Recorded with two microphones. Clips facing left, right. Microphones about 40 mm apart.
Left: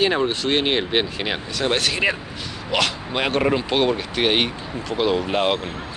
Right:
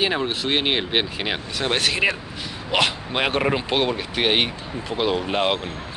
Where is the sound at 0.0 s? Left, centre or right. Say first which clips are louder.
Left 3 dB; centre.